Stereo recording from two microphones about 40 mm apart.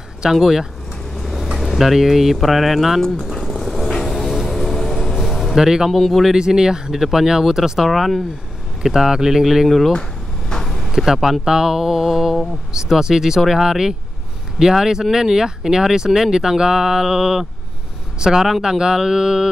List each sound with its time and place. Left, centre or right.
0.2 s speech: centre
1.1 s speech: centre
3.3 s vehicle: centre
5.1 s a sound: centre
5.9 s speech: centre
6.3 s speech: centre
8.8 s speech: centre
9.7 s speech: centre
10.5 s vehicle: centre
11.1 s speech: centre